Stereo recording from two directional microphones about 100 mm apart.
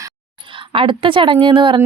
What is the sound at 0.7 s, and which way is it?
A woman's voice, 60° right (ahead or behind).